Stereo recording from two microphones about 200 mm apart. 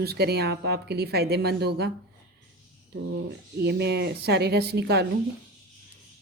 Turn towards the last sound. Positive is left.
turn(degrees=-55)  # may be behind; listen again after turning